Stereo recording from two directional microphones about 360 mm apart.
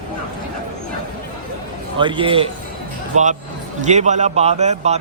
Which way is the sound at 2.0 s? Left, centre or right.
Centre.